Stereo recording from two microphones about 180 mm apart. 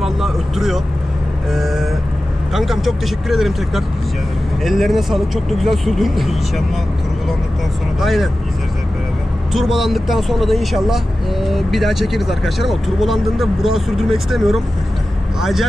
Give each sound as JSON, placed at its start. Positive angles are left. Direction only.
{"t": 0.0, "sound": "vehicle", "side_deg": 0}
{"t": 2.5, "sound": "speech", "side_deg": 0}
{"t": 8.0, "sound": "speech", "side_deg": 0}
{"t": 9.5, "sound": "speech", "side_deg": 0}